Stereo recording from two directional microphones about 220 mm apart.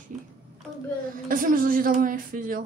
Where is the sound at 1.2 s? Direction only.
40° right (ahead or behind).